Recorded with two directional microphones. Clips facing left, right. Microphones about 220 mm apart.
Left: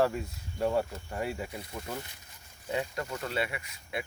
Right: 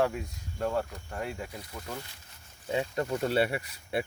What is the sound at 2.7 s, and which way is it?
Speech, 20° right (ahead or behind).